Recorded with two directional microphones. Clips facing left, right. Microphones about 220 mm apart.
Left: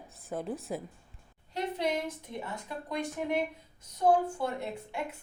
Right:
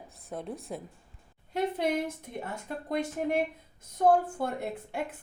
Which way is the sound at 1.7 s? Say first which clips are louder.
Right 2 dB; 55° right (ahead or behind).